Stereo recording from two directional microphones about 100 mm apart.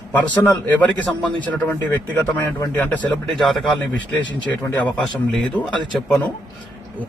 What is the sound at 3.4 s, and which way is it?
Speech, centre (ahead or behind).